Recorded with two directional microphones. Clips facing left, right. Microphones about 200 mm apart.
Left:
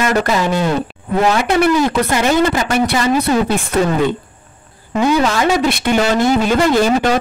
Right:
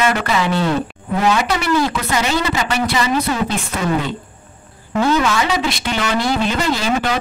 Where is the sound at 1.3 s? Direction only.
55° left (ahead or behind).